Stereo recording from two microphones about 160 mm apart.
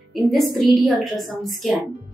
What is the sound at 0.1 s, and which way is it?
A woman's voice, centre (ahead or behind).